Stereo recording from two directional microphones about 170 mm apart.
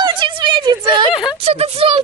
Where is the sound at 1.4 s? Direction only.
35° right (ahead or behind).